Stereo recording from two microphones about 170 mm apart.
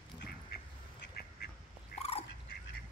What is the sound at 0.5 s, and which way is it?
Duck, 70° left (ahead or behind).